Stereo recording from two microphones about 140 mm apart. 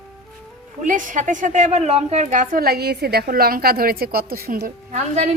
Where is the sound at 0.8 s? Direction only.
65° right (ahead or behind); by 4.9 s 90° right.